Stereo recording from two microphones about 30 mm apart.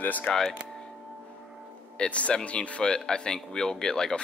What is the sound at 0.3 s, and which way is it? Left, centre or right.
Speech, centre.